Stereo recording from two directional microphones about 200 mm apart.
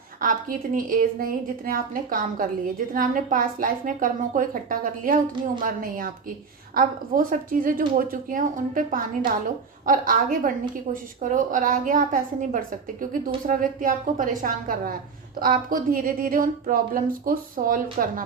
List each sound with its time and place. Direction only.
0.2 s a woman's voice: 40° right (ahead or behind)